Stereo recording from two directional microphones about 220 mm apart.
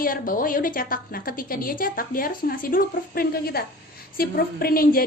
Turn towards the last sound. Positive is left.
turn(degrees=40)  # may be behind; listen again after turning